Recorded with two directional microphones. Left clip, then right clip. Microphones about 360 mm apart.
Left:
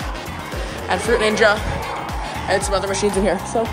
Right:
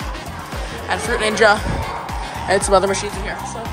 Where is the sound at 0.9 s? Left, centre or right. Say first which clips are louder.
Left 2 dB; centre.